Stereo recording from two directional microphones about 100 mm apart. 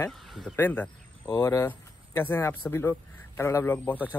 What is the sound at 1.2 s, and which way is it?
Speech, 40° left (ahead or behind).